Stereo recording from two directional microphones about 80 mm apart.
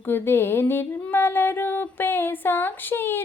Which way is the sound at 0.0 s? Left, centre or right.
Left.